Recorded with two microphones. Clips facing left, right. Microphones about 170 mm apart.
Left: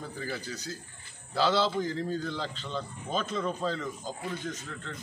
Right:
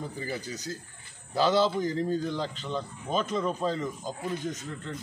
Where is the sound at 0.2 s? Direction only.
20° right (ahead or behind).